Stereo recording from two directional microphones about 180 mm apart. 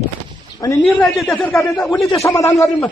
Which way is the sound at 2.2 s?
15° left (ahead or behind).